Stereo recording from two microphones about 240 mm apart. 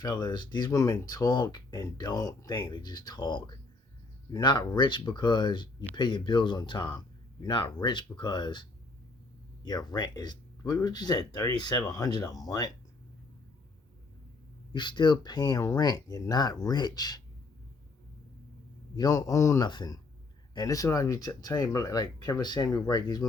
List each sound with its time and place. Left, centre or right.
0.0 s speech: centre
9.6 s speech: centre
14.7 s speech: centre
18.9 s speech: centre